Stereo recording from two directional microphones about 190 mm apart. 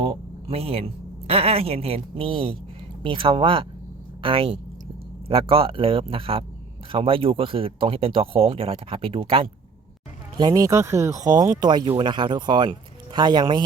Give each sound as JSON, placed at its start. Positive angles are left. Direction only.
{"t": 0.0, "sound": "speech", "side_deg": -30}